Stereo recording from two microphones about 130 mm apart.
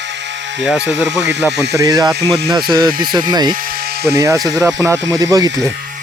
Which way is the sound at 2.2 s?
Centre (ahead or behind).